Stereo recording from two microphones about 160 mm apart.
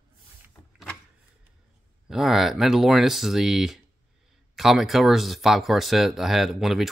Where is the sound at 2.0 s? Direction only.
Centre (ahead or behind).